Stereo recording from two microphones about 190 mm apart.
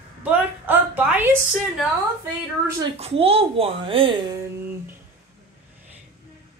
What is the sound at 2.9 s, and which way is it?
A woman's voice, 30° right (ahead or behind).